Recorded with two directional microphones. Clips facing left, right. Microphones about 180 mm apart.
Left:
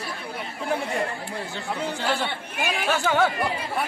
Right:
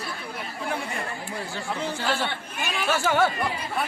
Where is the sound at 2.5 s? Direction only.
50° left (ahead or behind).